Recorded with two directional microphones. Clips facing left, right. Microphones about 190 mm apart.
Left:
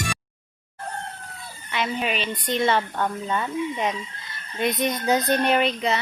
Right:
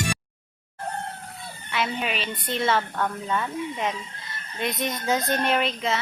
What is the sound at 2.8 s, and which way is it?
Speech, 15° left (ahead or behind).